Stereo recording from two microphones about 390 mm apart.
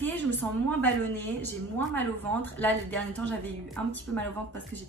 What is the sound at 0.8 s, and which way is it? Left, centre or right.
Speech, centre.